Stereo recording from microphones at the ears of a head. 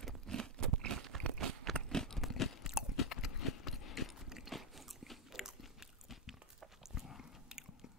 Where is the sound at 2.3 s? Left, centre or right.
Left.